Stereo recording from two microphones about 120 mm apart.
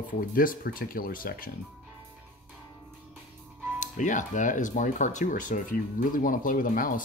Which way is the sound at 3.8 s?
90° left.